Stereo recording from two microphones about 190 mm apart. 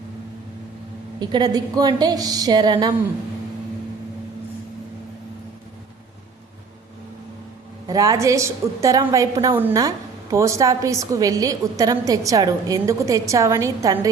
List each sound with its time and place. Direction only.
1.2 s a woman's voice: 20° right (ahead or behind)
7.9 s a woman's voice: 20° right (ahead or behind)